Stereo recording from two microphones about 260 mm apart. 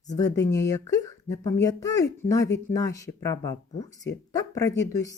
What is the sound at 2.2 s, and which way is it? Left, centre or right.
Speech, left.